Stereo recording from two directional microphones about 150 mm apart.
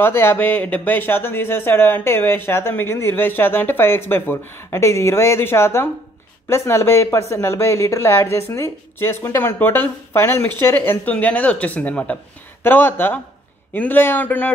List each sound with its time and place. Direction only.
0.0 s speech: 15° left (ahead or behind)